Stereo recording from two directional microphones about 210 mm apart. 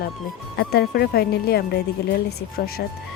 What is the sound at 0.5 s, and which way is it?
Speech, 50° left (ahead or behind).